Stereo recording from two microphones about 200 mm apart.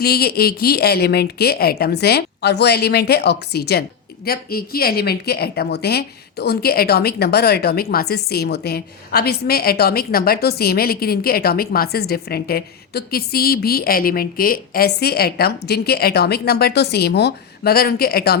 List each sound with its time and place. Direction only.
0.0 s a woman's voice: 50° left (ahead or behind)